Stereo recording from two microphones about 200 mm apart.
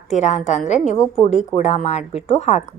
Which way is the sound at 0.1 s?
35° left (ahead or behind).